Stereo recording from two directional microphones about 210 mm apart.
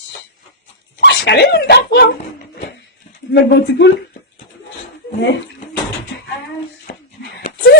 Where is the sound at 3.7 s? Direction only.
55° left (ahead or behind).